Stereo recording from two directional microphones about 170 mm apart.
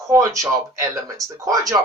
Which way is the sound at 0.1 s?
20° right (ahead or behind).